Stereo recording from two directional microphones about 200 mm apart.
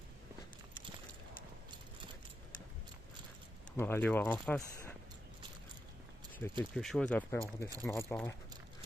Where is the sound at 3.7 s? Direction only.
10° left (ahead or behind).